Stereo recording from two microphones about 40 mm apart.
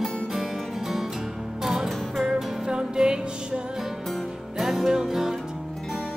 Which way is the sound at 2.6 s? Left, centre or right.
Centre.